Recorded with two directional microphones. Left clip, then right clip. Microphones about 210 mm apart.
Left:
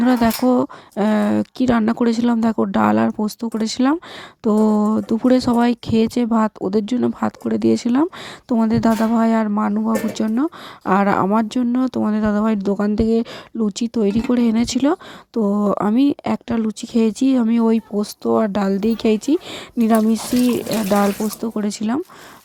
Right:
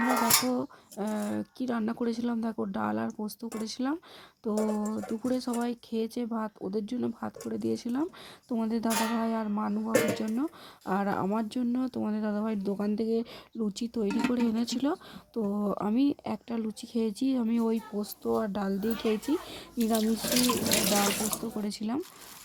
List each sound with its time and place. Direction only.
0.0 s speech: 30° left (ahead or behind)
21.4 s speech: 25° left (ahead or behind)